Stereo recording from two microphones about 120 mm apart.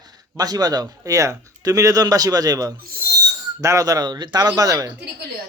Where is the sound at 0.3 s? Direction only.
35° right (ahead or behind).